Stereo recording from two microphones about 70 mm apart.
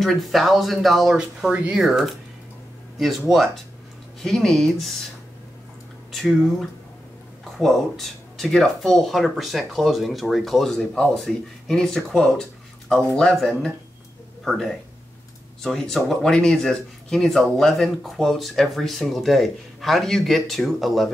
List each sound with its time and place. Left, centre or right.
0.0 s speech: centre
1.5 s speech: centre
1.8 s speech: centre
7.5 s speech: centre